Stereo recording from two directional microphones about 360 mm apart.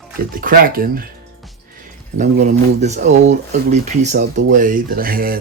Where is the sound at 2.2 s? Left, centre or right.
Centre.